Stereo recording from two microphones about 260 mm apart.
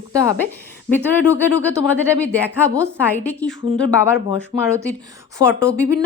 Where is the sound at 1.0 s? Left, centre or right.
Centre.